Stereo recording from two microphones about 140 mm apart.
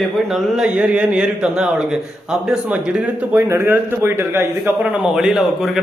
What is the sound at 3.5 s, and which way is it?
A man's voice, 20° right (ahead or behind).